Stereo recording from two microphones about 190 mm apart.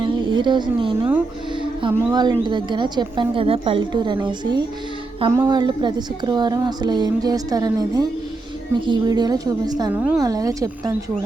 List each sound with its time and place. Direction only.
0.0 s a sound: 25° right (ahead or behind)
1.9 s a woman's voice: 15° right (ahead or behind)
9.9 s a woman's voice: 10° right (ahead or behind)
10.2 s a woman's voice: 20° right (ahead or behind)